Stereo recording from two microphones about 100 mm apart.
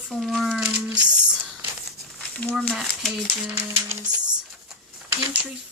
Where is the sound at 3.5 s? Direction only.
25° right (ahead or behind).